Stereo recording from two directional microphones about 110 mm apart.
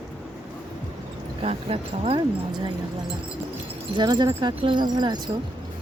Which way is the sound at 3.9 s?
40° right (ahead or behind).